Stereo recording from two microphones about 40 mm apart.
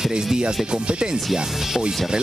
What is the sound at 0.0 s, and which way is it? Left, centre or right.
Speech, centre.